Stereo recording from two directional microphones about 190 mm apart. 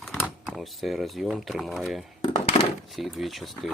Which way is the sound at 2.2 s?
30° left (ahead or behind).